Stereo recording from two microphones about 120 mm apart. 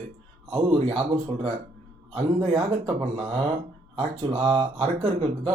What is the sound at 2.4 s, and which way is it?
Speech, 50° right (ahead or behind).